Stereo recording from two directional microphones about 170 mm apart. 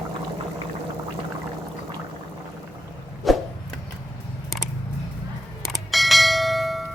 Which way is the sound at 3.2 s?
Centre (ahead or behind).